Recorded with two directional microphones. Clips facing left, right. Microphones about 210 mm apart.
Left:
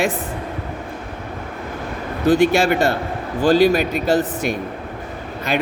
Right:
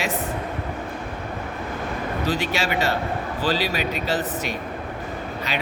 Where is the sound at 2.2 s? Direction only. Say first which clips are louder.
Left 12 dB; 50° left (ahead or behind).